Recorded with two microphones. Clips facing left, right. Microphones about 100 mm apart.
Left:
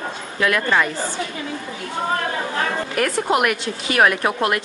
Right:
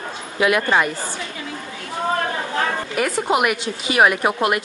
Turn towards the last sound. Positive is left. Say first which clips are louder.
# right 1 dB
turn(degrees=-10)  # may be behind; listen again after turning